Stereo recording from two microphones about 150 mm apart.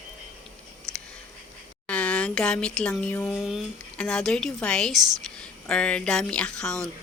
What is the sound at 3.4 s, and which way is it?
A woman's voice, centre (ahead or behind).